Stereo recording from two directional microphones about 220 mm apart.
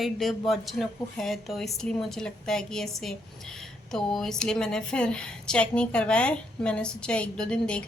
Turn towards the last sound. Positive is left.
turn(degrees=5)  # may be behind; listen again after turning